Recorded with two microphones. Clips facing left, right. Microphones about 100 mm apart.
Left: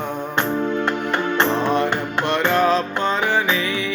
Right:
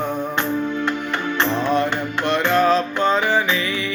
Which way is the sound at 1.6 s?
20° left (ahead or behind).